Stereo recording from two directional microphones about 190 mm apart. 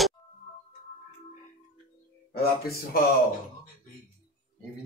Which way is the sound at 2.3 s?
55° left (ahead or behind).